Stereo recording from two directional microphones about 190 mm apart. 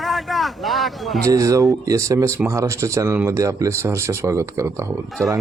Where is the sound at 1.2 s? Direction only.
15° right (ahead or behind).